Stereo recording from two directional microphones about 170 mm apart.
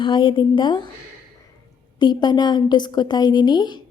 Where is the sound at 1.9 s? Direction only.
25° left (ahead or behind).